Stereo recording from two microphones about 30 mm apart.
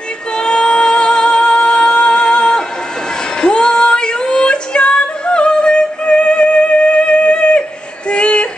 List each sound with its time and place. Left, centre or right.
0.4 s music: left
3.3 s female singing: left
8.1 s a sound: left